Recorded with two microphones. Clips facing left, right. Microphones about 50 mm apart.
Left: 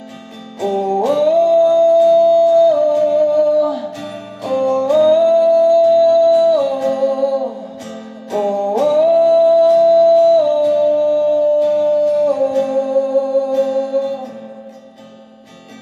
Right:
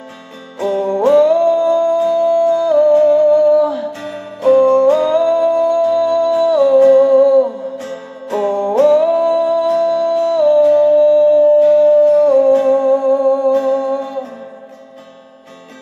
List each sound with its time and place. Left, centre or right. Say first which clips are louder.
0.6 s music: right 1 dB; right